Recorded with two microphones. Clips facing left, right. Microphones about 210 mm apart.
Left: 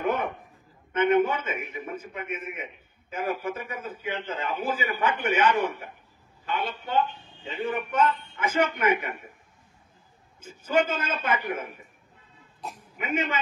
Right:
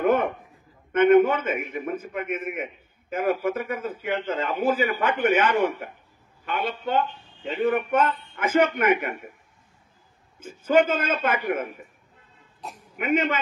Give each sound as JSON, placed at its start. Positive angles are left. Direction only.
{"t": 0.0, "sound": "a sound", "side_deg": -50}
{"t": 0.9, "sound": "a man's voice", "side_deg": -55}
{"t": 10.4, "sound": "a man's voice", "side_deg": -55}
{"t": 13.0, "sound": "a man's voice", "side_deg": -55}